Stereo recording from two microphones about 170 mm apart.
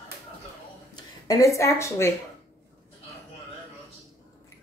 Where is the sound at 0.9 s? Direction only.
20° left (ahead or behind).